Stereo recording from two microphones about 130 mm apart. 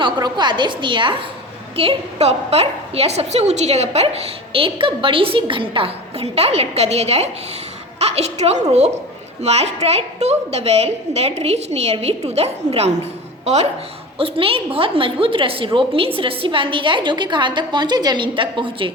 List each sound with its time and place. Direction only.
0.0 s a woman's voice: 35° right (ahead or behind); by 13.7 s 55° right (ahead or behind)
14.2 s a woman's voice: 45° right (ahead or behind)